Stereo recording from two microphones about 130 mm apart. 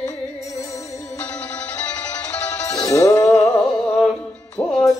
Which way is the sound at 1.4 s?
10° left (ahead or behind).